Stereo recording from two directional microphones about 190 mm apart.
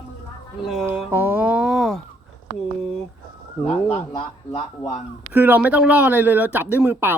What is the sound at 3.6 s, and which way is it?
Speech, 30° left (ahead or behind).